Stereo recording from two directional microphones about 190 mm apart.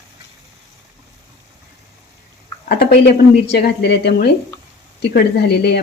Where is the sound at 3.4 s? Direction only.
65° left (ahead or behind).